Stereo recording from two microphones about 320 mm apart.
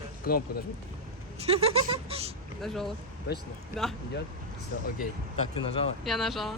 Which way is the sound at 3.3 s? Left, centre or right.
Left.